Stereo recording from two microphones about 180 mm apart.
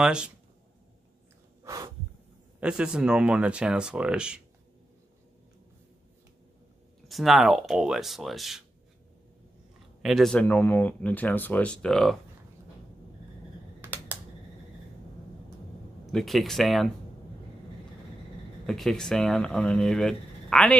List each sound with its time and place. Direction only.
0.0 s speech: 5° right (ahead or behind)
1.6 s snort: 20° right (ahead or behind)
2.6 s speech: 5° right (ahead or behind)
7.1 s speech: centre (ahead or behind)
10.0 s speech: centre (ahead or behind)
13.7 s computer keyboard: 10° right (ahead or behind)
16.1 s speech: centre (ahead or behind)
18.7 s speech: centre (ahead or behind)